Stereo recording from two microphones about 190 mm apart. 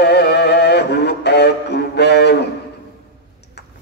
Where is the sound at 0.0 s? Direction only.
60° left (ahead or behind).